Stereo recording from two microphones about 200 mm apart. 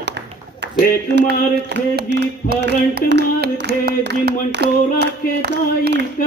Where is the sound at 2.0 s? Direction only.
60° right (ahead or behind).